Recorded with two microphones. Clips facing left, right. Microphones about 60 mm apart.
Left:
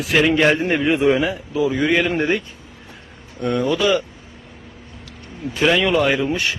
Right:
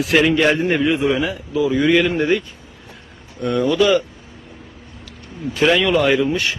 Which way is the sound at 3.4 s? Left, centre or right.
Centre.